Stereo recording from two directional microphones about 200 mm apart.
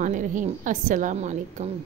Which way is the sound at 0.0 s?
40° right (ahead or behind).